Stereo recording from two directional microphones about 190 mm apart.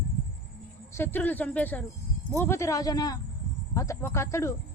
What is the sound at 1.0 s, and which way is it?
A man's voice, 10° left (ahead or behind).